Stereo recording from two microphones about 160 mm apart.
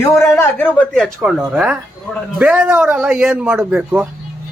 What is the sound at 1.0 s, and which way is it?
A man's voice, 5° right (ahead or behind).